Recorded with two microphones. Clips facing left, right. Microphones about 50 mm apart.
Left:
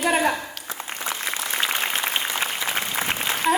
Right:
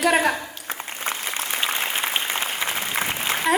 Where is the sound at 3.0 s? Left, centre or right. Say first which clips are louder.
Even; right.